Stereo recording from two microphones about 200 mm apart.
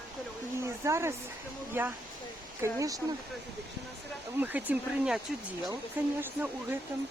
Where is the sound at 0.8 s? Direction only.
15° right (ahead or behind).